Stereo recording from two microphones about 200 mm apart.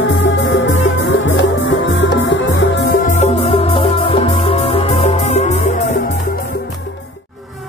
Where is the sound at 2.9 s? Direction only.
40° left (ahead or behind).